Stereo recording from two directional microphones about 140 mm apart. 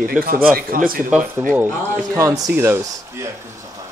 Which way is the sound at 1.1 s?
10° right (ahead or behind).